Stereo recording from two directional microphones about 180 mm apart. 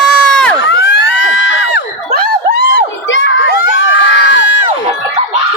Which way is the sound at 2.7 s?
90° left.